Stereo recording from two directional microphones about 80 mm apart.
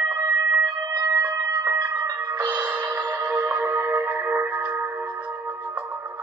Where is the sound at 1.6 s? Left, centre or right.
Right.